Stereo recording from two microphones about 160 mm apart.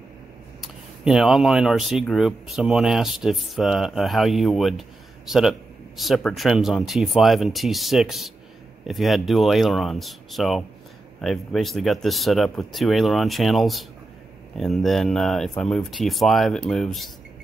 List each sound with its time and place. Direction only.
0.6 s speech: centre (ahead or behind)